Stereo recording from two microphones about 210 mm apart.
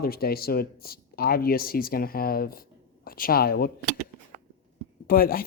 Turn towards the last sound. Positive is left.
turn(degrees=45)  # may be behind; listen again after turning